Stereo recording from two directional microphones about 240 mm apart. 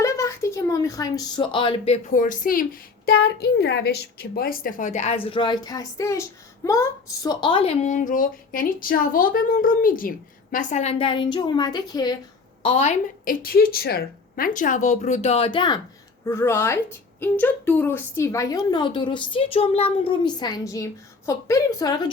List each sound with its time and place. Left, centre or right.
0.0 s a woman's voice: centre
12.6 s a woman's voice: left